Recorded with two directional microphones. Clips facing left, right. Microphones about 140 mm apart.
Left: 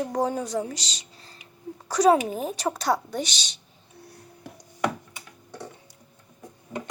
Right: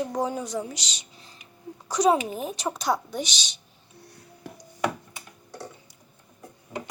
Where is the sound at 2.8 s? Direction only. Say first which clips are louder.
Even; 10° right (ahead or behind).